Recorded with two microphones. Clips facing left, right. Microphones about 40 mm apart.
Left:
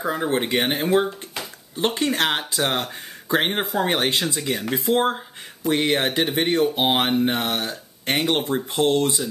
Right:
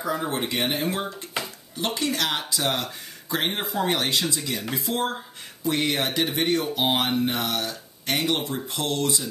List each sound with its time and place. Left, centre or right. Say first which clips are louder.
0.0 s speech: left 4 dB; left